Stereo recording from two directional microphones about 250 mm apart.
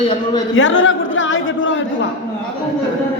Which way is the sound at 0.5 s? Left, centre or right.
Left.